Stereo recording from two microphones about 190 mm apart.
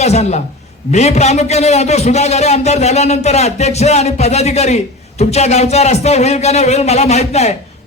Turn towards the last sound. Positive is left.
turn(degrees=35)  # may be behind; listen again after turning